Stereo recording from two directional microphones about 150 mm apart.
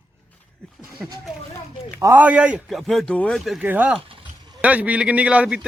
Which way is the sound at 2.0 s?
20° right (ahead or behind).